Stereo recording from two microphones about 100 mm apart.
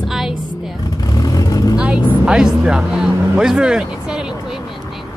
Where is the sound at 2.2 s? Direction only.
5° right (ahead or behind).